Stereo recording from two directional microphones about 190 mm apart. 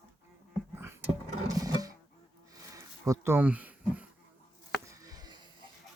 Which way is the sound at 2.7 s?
15° right (ahead or behind).